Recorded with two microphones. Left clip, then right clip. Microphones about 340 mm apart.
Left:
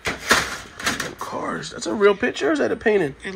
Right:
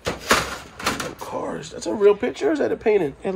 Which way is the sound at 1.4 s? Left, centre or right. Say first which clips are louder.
Left 1 dB; centre.